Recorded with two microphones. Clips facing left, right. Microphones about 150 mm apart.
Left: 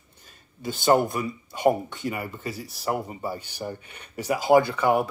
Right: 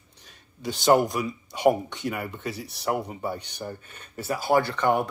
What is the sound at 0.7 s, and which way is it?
Speech, centre (ahead or behind).